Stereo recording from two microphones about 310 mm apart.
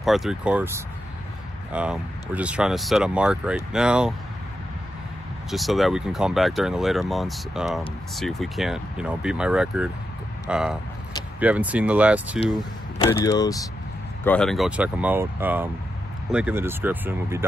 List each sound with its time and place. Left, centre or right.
0.0 s speech: centre
5.5 s speech: centre
12.5 s speech: centre